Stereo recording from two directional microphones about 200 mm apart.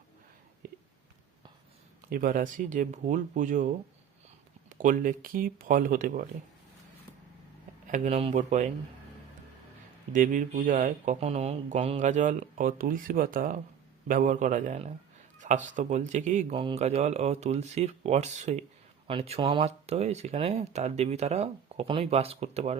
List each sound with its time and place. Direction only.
0.6 s a sound: 45° right (ahead or behind)
2.0 s speech: 45° right (ahead or behind)
4.7 s speech: 40° right (ahead or behind)
7.9 s speech: 35° right (ahead or behind)
10.1 s speech: 40° right (ahead or behind)